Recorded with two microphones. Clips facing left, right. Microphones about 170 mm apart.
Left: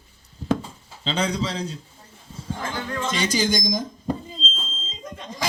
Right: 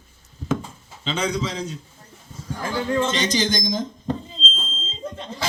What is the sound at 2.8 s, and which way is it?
Speech, 20° right (ahead or behind).